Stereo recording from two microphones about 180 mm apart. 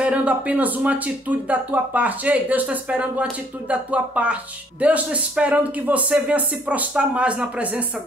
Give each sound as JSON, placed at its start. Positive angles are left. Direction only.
{"t": 0.0, "sound": "speech", "side_deg": -5}